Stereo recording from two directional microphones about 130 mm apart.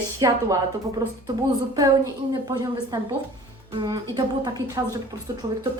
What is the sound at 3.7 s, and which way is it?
A woman's voice, 35° right (ahead or behind).